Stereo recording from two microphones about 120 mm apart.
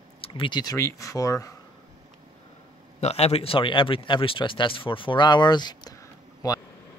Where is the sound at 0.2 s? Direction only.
45° left (ahead or behind); by 1.5 s 25° left (ahead or behind).